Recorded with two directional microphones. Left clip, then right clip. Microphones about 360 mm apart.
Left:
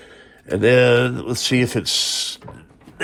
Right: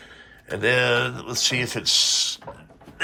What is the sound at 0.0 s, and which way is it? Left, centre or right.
A man's voice, centre.